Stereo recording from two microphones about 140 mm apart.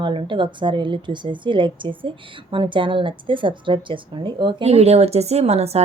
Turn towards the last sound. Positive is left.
turn(degrees=-50)  # may be behind; listen again after turning